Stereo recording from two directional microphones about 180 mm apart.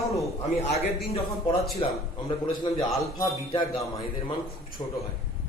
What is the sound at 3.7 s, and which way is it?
Speech, centre (ahead or behind).